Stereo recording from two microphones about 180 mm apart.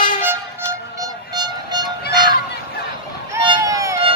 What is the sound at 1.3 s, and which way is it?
Train, 25° right (ahead or behind).